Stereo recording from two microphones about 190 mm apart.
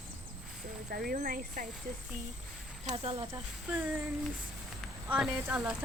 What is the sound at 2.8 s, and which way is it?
Speech, 35° right (ahead or behind).